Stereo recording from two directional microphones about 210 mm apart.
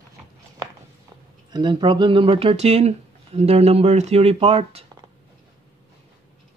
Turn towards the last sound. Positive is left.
turn(degrees=-30)  # may be behind; listen again after turning